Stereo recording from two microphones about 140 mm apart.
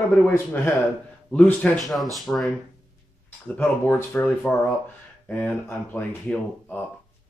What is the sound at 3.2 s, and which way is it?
Speech, 10° left (ahead or behind).